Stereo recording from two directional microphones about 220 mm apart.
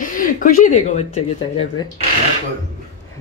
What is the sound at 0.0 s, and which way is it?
A woman's voice, 40° left (ahead or behind).